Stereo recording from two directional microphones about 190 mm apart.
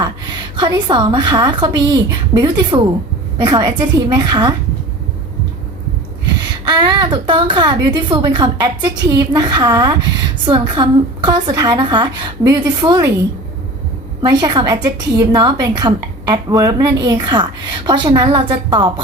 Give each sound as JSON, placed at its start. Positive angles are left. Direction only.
{"t": 0.5, "sound": "a woman's voice", "side_deg": -25}
{"t": 6.4, "sound": "a woman's voice", "side_deg": -20}
{"t": 14.2, "sound": "a woman's voice", "side_deg": -20}